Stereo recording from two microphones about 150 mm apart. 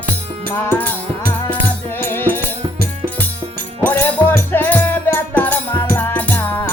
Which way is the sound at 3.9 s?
10° left (ahead or behind).